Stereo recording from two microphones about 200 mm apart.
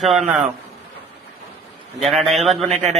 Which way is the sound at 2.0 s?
Centre (ahead or behind).